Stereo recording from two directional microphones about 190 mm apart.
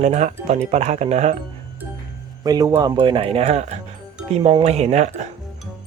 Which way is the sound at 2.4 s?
20° right (ahead or behind).